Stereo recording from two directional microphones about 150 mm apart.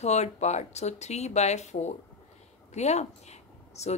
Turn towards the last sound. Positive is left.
turn(degrees=45)  # may be behind; listen again after turning